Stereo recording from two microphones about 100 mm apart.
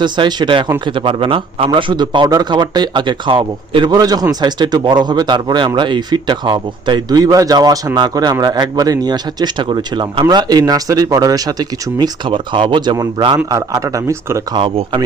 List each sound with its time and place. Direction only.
0.0 s a man's voice: 50° right (ahead or behind)
3.9 s a man's voice: 40° right (ahead or behind)
11.9 s speech: 50° right (ahead or behind)
13.5 s a man's voice: 35° right (ahead or behind)
14.5 s a man's voice: 60° right (ahead or behind)